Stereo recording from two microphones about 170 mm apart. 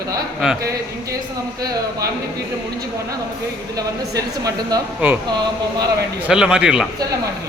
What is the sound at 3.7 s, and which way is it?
Speech, 20° right (ahead or behind).